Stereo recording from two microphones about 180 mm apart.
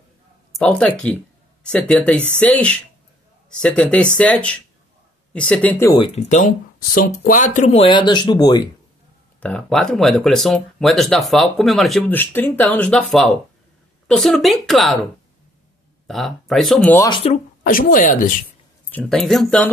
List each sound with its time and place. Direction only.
0.6 s speech: 5° left (ahead or behind)
5.9 s speech: 30° left (ahead or behind)
6.2 s speech: 45° left (ahead or behind); by 8.6 s 25° left (ahead or behind)
9.4 s speech: 5° left (ahead or behind)
16.1 s speech: centre (ahead or behind)
17.1 s speech: 35° left (ahead or behind)
17.6 s a woman's voice: 50° left (ahead or behind)
18.9 s speech: 5° left (ahead or behind)